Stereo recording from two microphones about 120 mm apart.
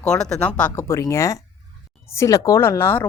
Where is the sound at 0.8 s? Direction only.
25° left (ahead or behind).